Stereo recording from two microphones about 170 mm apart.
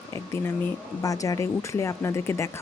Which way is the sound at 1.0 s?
20° left (ahead or behind).